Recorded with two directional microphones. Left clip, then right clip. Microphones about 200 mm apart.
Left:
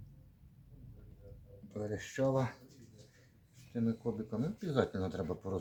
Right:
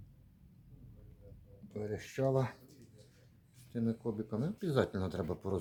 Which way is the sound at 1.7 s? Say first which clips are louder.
Left 1 dB; 30° right (ahead or behind).